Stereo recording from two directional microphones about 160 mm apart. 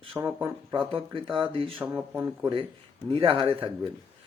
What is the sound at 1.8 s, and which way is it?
Speech, 10° right (ahead or behind).